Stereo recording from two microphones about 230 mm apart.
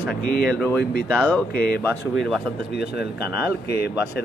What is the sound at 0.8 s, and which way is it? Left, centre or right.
Speech, left.